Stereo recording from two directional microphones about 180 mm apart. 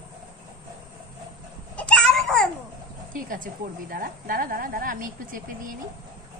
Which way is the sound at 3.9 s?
55° right (ahead or behind).